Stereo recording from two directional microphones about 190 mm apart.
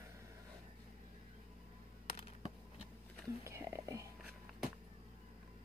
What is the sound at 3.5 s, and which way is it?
Whispering, 15° right (ahead or behind).